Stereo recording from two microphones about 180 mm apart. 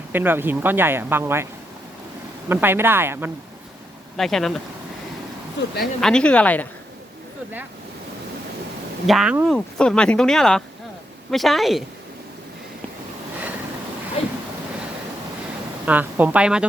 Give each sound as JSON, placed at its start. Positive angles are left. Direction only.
{"t": 0.1, "sound": "speech", "side_deg": -10}
{"t": 2.5, "sound": "speech", "side_deg": -10}
{"t": 4.2, "sound": "speech", "side_deg": 0}
{"t": 5.5, "sound": "speech", "side_deg": 65}
{"t": 6.0, "sound": "speech", "side_deg": 5}
{"t": 9.0, "sound": "speech", "side_deg": 0}
{"t": 15.9, "sound": "speech", "side_deg": -10}